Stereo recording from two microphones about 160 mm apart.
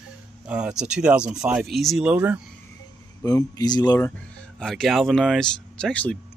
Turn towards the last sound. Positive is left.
turn(degrees=5)  # may be behind; listen again after turning